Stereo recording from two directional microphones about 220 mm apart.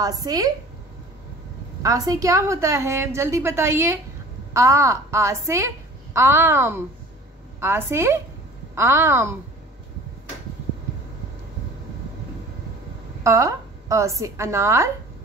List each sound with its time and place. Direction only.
0.0 s a woman's voice: 15° right (ahead or behind)
1.8 s a woman's voice: 15° right (ahead or behind)
13.2 s a woman's voice: 15° right (ahead or behind)